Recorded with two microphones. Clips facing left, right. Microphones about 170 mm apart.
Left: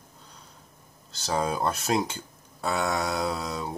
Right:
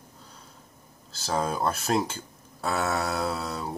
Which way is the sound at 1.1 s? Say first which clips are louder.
Left 1 dB; centre (ahead or behind).